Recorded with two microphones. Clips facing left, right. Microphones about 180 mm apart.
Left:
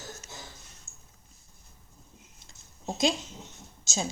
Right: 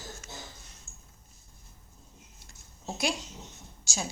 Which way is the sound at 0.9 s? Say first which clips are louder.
Right 1 dB; 45° right (ahead or behind).